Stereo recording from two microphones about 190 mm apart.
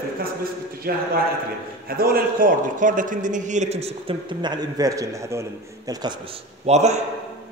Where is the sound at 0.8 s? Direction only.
55° right (ahead or behind); by 6.4 s 25° right (ahead or behind).